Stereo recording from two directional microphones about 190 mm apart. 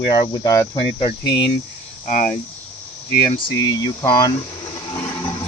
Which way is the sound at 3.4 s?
20° left (ahead or behind).